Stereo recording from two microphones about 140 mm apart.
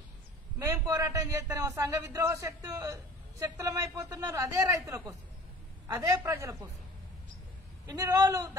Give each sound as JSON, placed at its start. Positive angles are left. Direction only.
{"t": 0.6, "sound": "a man's voice", "side_deg": -20}
{"t": 7.8, "sound": "a man's voice", "side_deg": -25}